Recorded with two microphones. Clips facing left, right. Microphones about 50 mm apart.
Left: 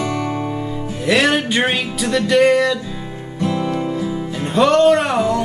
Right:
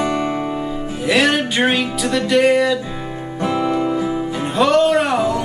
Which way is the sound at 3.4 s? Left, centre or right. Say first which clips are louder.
Right 2 dB; right.